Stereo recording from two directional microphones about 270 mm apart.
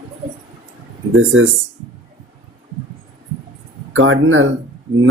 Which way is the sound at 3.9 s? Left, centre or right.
Right.